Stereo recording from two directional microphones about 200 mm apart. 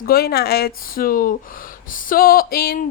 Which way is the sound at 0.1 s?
50° left (ahead or behind).